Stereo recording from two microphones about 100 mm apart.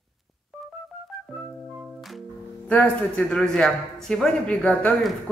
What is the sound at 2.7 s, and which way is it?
A man's voice, 15° left (ahead or behind).